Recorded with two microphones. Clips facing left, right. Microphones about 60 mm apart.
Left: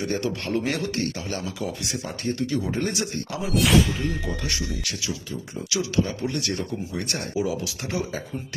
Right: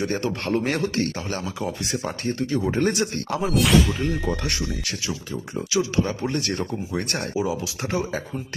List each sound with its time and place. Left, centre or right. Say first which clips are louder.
0.0 s speech: right 2 dB; right
2.6 s speech: right 4 dB; right
3.4 s speech: right 1 dB; centre
4.0 s speech: right 3 dB; right
5.7 s speech: right 2 dB; right
7.3 s speech: even; right